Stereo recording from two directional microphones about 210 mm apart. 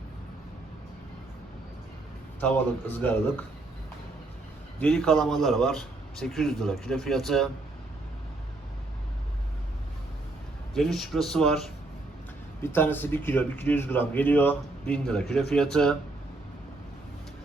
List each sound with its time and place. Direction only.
2.4 s speech: 10° left (ahead or behind)
4.8 s a man's voice: 5° left (ahead or behind)
10.8 s a man's voice: centre (ahead or behind)